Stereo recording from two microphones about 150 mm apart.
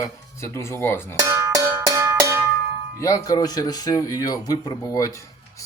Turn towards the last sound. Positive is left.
turn(degrees=20)  # may be behind; listen again after turning